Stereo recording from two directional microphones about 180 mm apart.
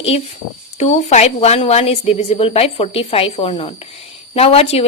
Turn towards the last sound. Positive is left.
turn(degrees=35)  # may be behind; listen again after turning